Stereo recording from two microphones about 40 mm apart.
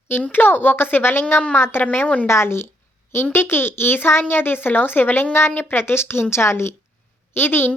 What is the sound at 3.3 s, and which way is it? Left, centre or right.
Speech, left.